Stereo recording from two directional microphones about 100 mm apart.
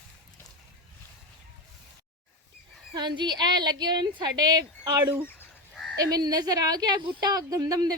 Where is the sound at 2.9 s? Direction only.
50° right (ahead or behind).